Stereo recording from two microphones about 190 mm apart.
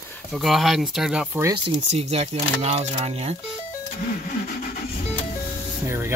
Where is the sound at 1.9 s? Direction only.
35° right (ahead or behind).